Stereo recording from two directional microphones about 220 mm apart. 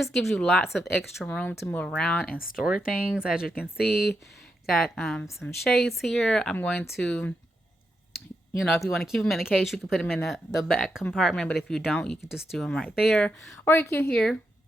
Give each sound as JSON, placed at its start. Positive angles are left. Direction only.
{"t": 0.0, "sound": "speech", "side_deg": 0}
{"t": 3.8, "sound": "speech", "side_deg": 45}
{"t": 4.7, "sound": "speech", "side_deg": 0}
{"t": 8.6, "sound": "speech", "side_deg": 0}